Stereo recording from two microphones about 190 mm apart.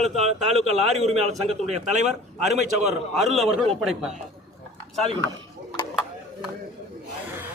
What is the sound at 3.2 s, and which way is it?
Speech, centre (ahead or behind).